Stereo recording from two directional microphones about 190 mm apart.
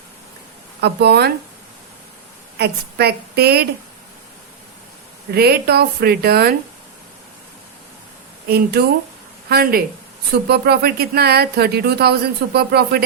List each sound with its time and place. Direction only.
0.8 s speech: 60° right (ahead or behind)
2.6 s speech: 60° right (ahead or behind)
5.3 s speech: 55° right (ahead or behind)
8.4 s speech: 55° right (ahead or behind)